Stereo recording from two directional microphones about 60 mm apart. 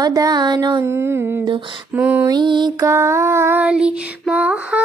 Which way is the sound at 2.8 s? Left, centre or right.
Right.